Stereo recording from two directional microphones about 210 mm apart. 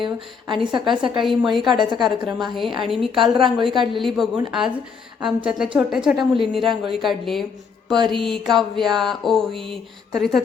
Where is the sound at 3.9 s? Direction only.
Centre (ahead or behind).